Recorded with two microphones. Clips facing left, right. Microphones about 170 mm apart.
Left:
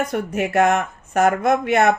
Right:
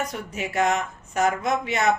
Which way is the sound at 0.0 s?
55° left (ahead or behind).